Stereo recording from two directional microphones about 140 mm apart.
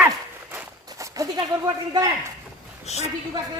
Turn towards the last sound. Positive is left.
turn(degrees=50)  # may be behind; listen again after turning